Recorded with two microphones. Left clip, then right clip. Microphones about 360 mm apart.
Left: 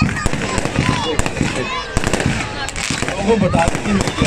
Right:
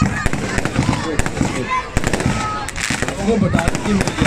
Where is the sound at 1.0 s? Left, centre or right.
Centre.